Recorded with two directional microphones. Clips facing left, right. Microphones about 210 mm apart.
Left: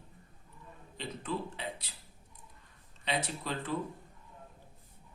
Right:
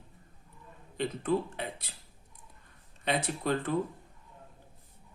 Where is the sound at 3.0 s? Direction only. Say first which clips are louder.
Right 5 dB; 50° right (ahead or behind).